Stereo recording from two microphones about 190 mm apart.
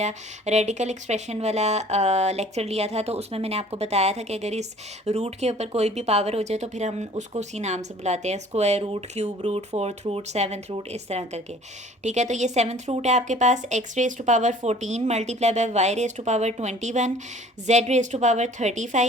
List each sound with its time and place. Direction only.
0.0 s speech: 35° right (ahead or behind)